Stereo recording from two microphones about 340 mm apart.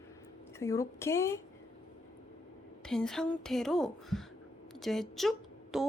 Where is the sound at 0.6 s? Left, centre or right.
Centre.